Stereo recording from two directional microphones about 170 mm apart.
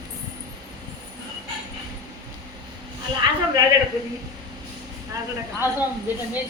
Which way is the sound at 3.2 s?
25° right (ahead or behind).